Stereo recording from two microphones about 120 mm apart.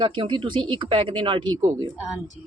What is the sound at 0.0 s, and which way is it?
Speech, 40° right (ahead or behind).